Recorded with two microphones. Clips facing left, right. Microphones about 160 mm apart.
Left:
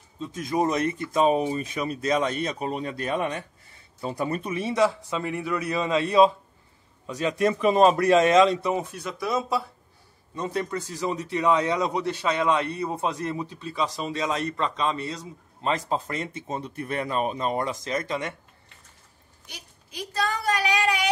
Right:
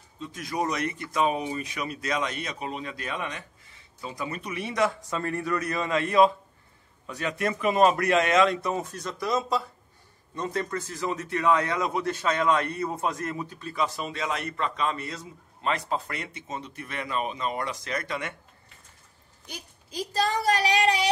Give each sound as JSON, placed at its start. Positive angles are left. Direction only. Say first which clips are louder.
{"t": 0.3, "sound": "speech", "louder": "left 5 dB", "side_deg": 25}
{"t": 1.7, "sound": "speech", "louder": "left 5 dB", "side_deg": 30}
{"t": 4.5, "sound": "speech", "louder": "left 2 dB", "side_deg": 30}
{"t": 5.3, "sound": "a man's voice", "louder": "left 1 dB", "side_deg": 5}
{"t": 7.2, "sound": "speech", "louder": "left 5 dB", "side_deg": 30}
{"t": 8.6, "sound": "a man's voice", "louder": "left 3 dB", "side_deg": 10}
{"t": 17.6, "sound": "speech", "louder": "left 4 dB", "side_deg": 25}
{"t": 19.4, "sound": "a woman's voice", "louder": "right 4 dB", "side_deg": -40}